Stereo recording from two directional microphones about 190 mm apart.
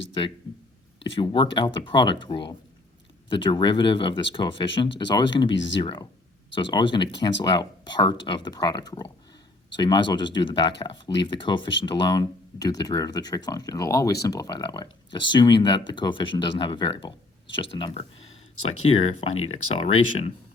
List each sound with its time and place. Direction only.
1.1 s speech: 25° left (ahead or behind)